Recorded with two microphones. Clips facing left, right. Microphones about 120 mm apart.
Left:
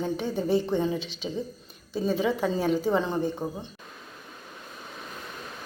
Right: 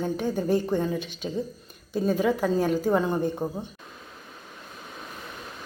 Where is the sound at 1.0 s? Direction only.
50° right (ahead or behind).